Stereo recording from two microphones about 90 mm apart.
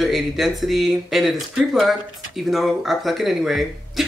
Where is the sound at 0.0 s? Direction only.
Centre (ahead or behind).